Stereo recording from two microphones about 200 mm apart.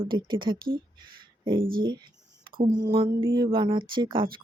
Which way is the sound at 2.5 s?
45° right (ahead or behind).